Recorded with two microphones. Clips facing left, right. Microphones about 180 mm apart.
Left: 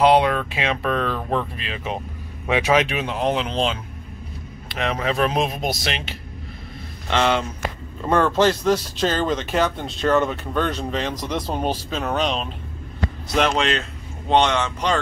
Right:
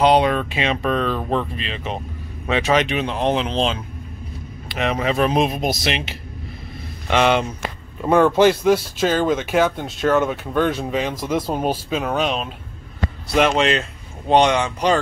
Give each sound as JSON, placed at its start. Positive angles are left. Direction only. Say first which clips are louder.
{"t": 0.0, "sound": "speech", "louder": "right 1 dB", "side_deg": 0}
{"t": 7.1, "sound": "speech", "louder": "right 3 dB", "side_deg": -15}